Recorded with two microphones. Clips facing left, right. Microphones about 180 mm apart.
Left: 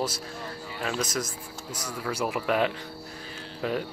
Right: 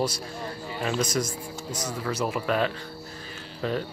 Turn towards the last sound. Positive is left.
turn(degrees=10)  # may be behind; listen again after turning